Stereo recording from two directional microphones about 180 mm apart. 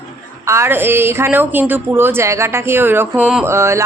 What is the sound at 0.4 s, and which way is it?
Speech, 15° right (ahead or behind).